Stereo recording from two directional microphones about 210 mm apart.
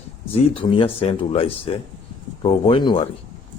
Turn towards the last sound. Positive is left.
turn(degrees=25)  # may be behind; listen again after turning